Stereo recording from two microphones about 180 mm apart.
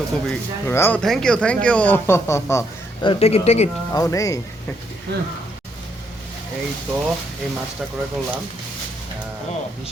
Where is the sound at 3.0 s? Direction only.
35° left (ahead or behind).